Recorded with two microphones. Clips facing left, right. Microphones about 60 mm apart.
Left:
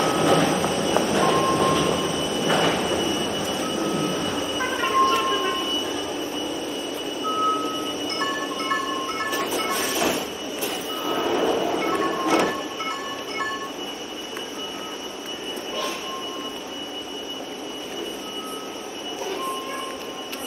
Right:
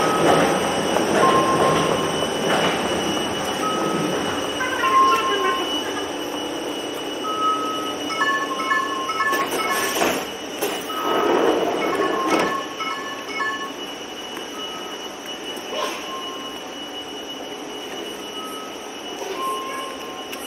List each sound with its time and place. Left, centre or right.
0.0 s train: right
9.3 s vehicle: right